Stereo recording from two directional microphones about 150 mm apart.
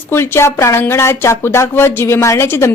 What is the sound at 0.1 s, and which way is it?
Speech, 15° left (ahead or behind).